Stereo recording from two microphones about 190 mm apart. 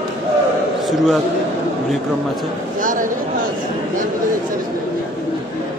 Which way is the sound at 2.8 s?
45° right (ahead or behind).